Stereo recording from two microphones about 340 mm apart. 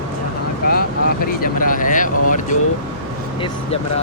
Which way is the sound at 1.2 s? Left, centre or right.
Left.